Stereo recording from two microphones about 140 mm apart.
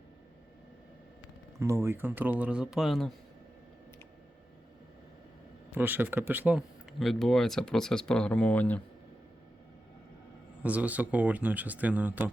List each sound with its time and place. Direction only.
1.5 s a man's voice: 20° right (ahead or behind); by 3.1 s centre (ahead or behind)
5.7 s a man's voice: 15° right (ahead or behind)
6.6 s speech: centre (ahead or behind)
10.6 s a man's voice: 10° right (ahead or behind)